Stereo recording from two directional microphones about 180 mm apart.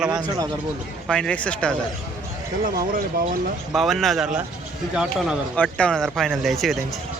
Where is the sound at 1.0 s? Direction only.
5° left (ahead or behind).